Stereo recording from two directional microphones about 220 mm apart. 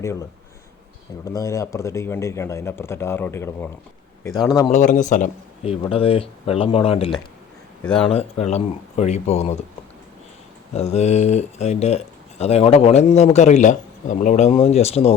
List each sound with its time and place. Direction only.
0.0 s speech: 15° left (ahead or behind)
4.7 s a man's voice: 35° left (ahead or behind)
5.8 s speech: 25° left (ahead or behind)
10.8 s speech: 30° left (ahead or behind)